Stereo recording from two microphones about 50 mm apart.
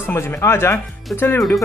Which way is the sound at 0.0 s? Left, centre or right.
Left.